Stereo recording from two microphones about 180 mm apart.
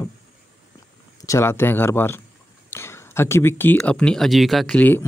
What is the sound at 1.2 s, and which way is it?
Speech, 15° left (ahead or behind).